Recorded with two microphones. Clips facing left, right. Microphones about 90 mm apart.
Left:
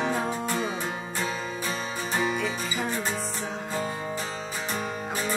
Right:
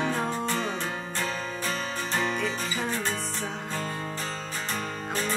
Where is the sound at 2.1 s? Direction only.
5° left (ahead or behind).